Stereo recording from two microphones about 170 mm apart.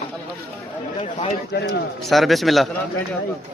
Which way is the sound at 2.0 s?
Centre (ahead or behind).